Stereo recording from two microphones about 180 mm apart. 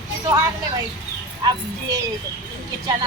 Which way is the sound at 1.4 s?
25° right (ahead or behind).